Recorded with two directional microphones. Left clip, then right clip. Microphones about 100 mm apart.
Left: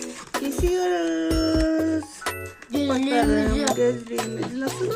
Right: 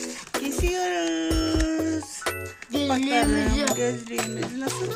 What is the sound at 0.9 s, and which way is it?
Music, 20° right (ahead or behind).